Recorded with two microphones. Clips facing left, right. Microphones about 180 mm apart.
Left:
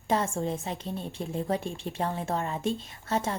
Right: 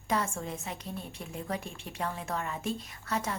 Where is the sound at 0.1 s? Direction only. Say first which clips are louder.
Left 5 dB; 30° left (ahead or behind).